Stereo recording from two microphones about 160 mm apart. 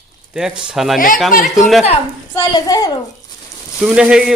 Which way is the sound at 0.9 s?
60° left (ahead or behind).